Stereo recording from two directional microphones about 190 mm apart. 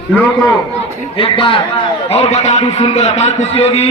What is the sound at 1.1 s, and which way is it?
A man's voice, 30° left (ahead or behind).